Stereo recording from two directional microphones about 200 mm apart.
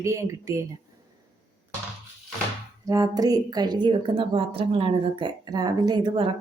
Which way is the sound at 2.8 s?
20° right (ahead or behind).